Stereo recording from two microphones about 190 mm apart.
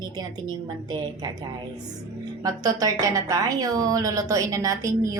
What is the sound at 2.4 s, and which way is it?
A woman's voice, 20° right (ahead or behind).